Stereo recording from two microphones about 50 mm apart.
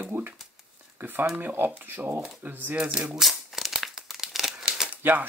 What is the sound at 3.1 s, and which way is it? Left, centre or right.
Crumpling, centre.